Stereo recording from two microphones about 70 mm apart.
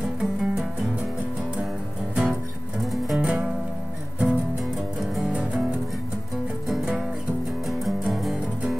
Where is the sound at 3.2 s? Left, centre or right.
Centre.